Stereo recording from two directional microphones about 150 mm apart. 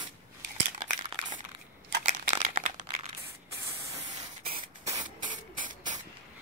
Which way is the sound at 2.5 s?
50° right (ahead or behind).